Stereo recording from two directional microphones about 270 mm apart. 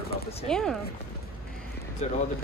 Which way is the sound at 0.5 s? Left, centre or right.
Centre.